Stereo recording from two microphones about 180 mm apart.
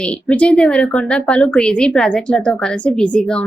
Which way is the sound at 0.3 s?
5° left (ahead or behind).